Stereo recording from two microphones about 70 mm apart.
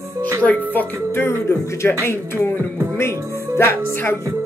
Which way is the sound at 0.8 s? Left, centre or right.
Left.